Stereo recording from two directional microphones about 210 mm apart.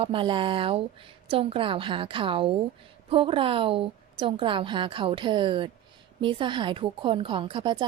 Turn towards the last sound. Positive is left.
turn(degrees=-20)  # may be behind; listen again after turning